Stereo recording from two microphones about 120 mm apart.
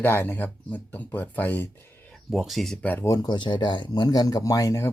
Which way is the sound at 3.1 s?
35° left (ahead or behind).